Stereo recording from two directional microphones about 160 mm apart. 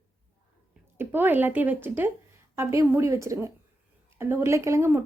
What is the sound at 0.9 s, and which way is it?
A woman's voice, 10° right (ahead or behind).